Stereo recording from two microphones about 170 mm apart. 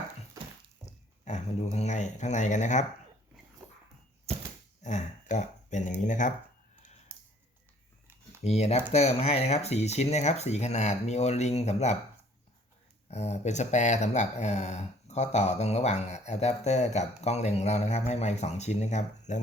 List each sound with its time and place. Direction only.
1.2 s speech: 40° left (ahead or behind)
4.8 s a sound: 45° left (ahead or behind)
6.1 s speech: 50° left (ahead or behind)
7.1 s typing: 15° right (ahead or behind)
8.4 s speech: 40° left (ahead or behind)
13.1 s speech: 40° left (ahead or behind)